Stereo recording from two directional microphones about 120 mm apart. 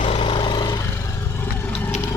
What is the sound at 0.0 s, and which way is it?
Vehicle, 50° left (ahead or behind).